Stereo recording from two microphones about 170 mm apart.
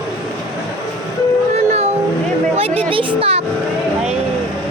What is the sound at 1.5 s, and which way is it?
Music, 40° right (ahead or behind).